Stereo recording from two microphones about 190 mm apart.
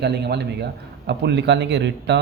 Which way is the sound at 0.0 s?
60° right (ahead or behind).